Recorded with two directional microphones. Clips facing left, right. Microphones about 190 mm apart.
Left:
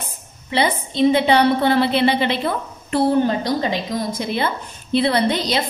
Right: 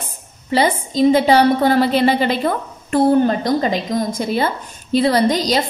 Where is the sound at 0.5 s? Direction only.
40° right (ahead or behind).